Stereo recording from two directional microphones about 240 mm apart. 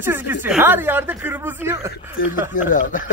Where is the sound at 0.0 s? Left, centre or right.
Centre.